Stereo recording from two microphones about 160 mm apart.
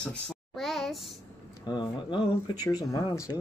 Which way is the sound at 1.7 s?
25° left (ahead or behind).